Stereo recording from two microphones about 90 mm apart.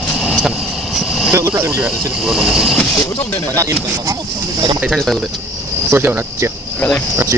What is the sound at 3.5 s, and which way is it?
Speech, 40° right (ahead or behind).